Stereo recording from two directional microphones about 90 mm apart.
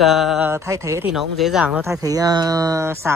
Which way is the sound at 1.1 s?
5° right (ahead or behind).